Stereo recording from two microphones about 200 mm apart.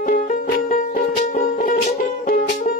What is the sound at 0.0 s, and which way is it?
Music, 40° left (ahead or behind).